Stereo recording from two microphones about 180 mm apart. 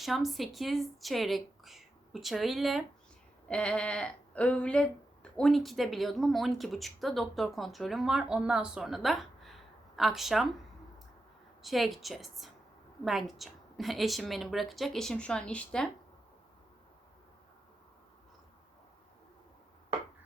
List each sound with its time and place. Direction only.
0.0 s speech: centre (ahead or behind)
11.6 s speech: centre (ahead or behind)